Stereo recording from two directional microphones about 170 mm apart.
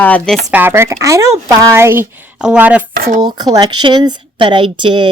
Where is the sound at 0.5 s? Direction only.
15° right (ahead or behind).